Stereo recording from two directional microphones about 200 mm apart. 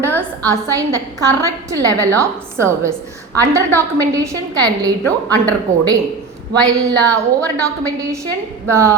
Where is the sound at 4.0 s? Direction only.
15° right (ahead or behind).